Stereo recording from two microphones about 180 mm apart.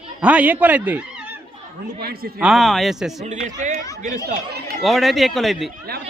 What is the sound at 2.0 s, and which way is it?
Speech, 55° right (ahead or behind).